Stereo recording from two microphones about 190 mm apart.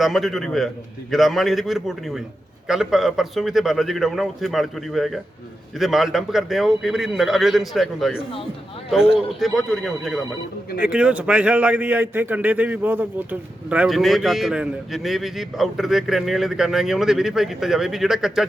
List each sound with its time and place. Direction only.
0.0 s a man's voice: centre (ahead or behind)
9.4 s a man's voice: centre (ahead or behind)